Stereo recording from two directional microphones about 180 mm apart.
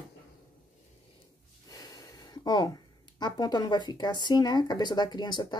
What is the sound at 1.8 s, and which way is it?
Speech, 20° left (ahead or behind).